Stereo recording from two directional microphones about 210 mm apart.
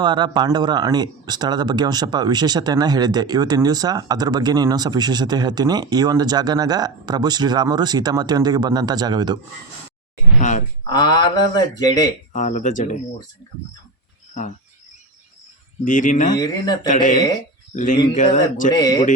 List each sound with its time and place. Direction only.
0.0 s speech: 20° right (ahead or behind)
10.8 s speech: 20° left (ahead or behind)
12.3 s speech: 35° left (ahead or behind)
15.8 s speech: 40° left (ahead or behind)
16.3 s speech: 20° left (ahead or behind)
16.8 s speech: 35° left (ahead or behind)
18.7 s speech: 20° left (ahead or behind)